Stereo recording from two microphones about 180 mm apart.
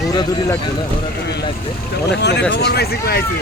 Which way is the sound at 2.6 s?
65° left (ahead or behind).